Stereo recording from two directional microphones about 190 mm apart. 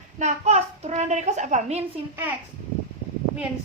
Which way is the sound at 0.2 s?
35° right (ahead or behind).